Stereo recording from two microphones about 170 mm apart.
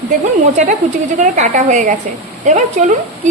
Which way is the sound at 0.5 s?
45° right (ahead or behind).